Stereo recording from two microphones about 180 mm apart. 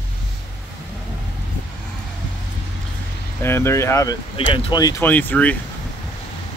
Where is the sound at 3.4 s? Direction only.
15° left (ahead or behind).